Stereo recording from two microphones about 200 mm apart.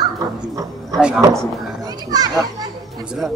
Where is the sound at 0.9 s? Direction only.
5° right (ahead or behind).